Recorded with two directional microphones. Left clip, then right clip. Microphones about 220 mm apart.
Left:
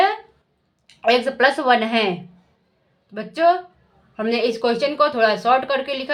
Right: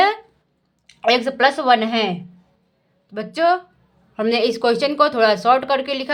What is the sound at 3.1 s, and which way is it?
A woman's voice, 10° right (ahead or behind).